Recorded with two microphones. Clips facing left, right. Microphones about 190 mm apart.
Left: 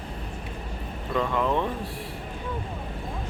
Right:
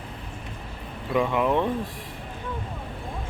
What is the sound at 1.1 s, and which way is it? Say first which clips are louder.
Speech: right 3 dB; 15° right (ahead or behind).